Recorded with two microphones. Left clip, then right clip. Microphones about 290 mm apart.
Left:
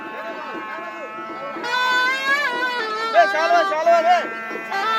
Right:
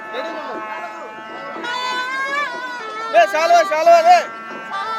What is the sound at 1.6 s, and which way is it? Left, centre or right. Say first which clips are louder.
Music: left 4 dB; left.